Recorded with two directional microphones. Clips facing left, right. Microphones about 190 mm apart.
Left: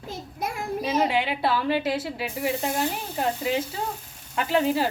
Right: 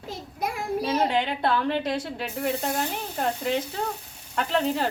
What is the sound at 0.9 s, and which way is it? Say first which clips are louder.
Speech: left 2 dB; 5° left (ahead or behind).